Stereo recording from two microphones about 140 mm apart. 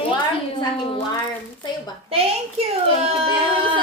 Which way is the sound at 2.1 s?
45° right (ahead or behind).